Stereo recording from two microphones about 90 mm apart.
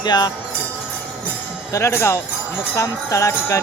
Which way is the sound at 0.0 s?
50° left (ahead or behind).